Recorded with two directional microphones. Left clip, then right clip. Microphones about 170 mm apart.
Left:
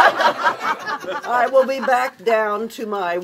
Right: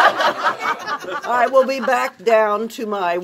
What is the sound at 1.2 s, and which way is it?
Speech, 30° right (ahead or behind).